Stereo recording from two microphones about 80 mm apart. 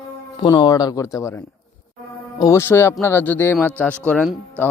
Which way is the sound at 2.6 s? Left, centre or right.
Left.